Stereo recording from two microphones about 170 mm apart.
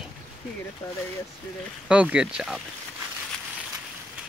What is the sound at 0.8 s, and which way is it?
Speech, 15° left (ahead or behind).